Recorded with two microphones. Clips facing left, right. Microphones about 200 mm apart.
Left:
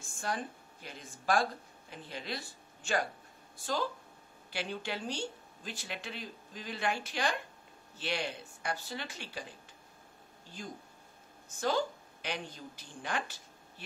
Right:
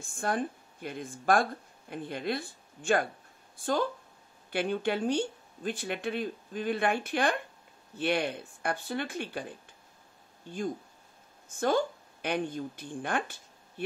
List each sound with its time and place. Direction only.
0.0 s speech: 55° right (ahead or behind)
11.4 s a woman's voice: 55° right (ahead or behind)